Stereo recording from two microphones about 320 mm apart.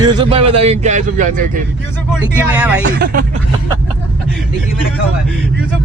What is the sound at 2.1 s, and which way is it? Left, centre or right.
Speech, centre.